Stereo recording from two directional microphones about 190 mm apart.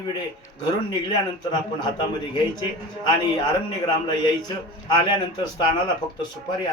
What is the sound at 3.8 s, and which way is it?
Speech, 25° left (ahead or behind).